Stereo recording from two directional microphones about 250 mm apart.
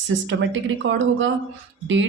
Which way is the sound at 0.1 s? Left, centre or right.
Right.